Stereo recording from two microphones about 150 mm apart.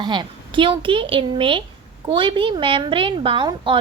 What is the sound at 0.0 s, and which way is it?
A woman's voice, 30° right (ahead or behind).